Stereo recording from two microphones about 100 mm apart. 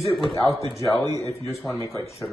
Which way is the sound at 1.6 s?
5° left (ahead or behind).